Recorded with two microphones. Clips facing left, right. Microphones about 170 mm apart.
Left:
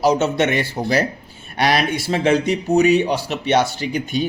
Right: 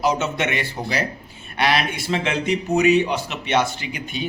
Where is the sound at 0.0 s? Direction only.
40° left (ahead or behind).